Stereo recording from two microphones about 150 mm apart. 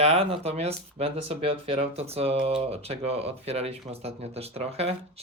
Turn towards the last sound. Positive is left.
turn(degrees=-45)  # may be behind; listen again after turning